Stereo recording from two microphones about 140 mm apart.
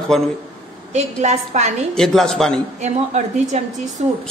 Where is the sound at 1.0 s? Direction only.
55° right (ahead or behind).